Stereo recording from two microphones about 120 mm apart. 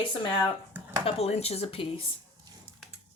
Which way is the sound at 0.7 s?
15° right (ahead or behind).